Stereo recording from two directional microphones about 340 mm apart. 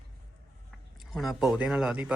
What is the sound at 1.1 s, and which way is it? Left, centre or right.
Speech, centre.